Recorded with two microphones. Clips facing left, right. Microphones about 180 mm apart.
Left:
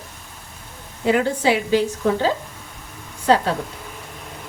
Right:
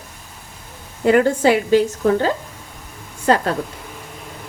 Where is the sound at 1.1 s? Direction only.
50° right (ahead or behind).